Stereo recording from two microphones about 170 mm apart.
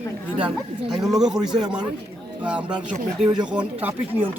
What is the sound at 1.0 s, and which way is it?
Speech, centre (ahead or behind).